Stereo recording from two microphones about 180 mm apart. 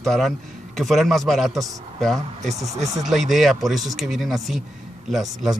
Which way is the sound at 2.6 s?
40° right (ahead or behind).